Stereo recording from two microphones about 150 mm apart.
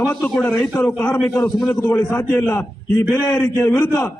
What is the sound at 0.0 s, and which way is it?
A man's voice, 5° left (ahead or behind).